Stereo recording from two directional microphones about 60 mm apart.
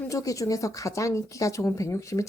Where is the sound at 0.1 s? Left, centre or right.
Left.